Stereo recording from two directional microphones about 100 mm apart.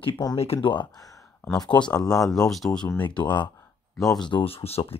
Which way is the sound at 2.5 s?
5° left (ahead or behind).